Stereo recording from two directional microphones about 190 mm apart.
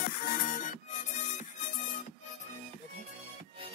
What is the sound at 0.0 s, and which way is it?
Music, 45° left (ahead or behind).